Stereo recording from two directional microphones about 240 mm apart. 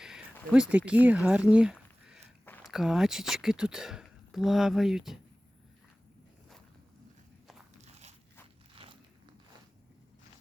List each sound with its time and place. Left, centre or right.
0.5 s speech: centre
8.7 s walk: right